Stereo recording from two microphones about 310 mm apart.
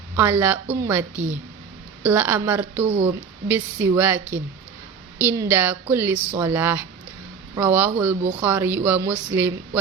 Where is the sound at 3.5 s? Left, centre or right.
Centre.